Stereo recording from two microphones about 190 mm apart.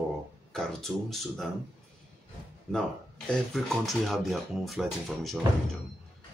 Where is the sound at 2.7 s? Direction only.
5° left (ahead or behind).